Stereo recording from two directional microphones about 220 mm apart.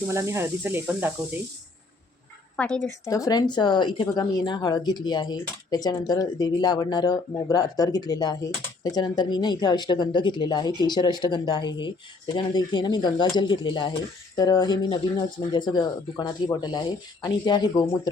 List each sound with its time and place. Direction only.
0.1 s speech: 10° right (ahead or behind)
2.6 s speech: 5° left (ahead or behind)
3.0 s speech: 15° left (ahead or behind)